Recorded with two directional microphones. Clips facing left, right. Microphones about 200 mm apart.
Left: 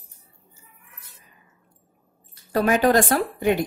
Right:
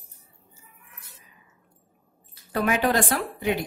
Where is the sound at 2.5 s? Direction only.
40° left (ahead or behind).